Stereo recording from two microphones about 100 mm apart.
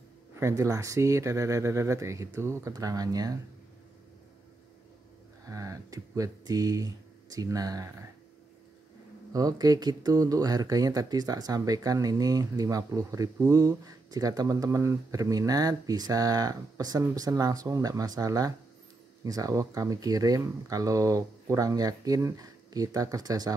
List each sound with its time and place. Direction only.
0.4 s speech: 30° right (ahead or behind)
5.4 s speech: 35° right (ahead or behind)
9.3 s speech: 40° right (ahead or behind)